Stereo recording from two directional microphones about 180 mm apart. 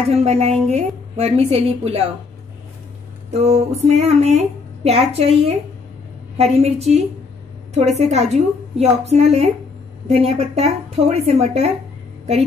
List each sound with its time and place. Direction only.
0.1 s speech: 35° right (ahead or behind)
3.3 s speech: 40° right (ahead or behind)